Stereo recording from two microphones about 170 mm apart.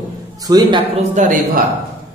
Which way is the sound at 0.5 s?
25° right (ahead or behind).